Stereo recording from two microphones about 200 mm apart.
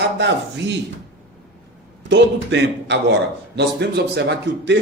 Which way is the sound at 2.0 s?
60° right (ahead or behind).